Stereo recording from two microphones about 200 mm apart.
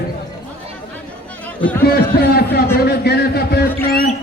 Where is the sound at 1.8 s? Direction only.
50° left (ahead or behind).